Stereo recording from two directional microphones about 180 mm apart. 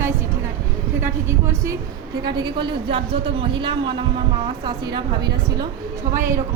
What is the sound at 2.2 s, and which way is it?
A woman's voice, 25° right (ahead or behind).